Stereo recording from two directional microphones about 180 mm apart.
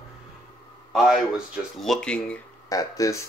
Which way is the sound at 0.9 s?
Centre (ahead or behind).